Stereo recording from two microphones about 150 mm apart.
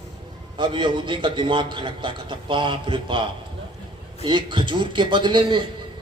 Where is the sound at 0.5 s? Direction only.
35° right (ahead or behind).